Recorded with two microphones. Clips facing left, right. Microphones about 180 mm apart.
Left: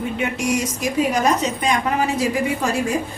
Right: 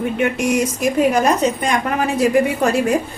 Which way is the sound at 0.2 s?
55° right (ahead or behind).